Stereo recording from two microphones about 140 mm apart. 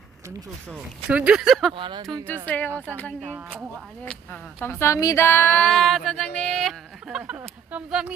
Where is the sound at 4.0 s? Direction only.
10° left (ahead or behind).